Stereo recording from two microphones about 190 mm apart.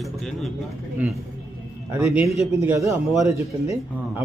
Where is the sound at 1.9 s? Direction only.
15° right (ahead or behind).